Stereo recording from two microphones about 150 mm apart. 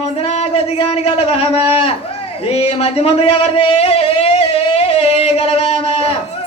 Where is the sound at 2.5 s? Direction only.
40° left (ahead or behind).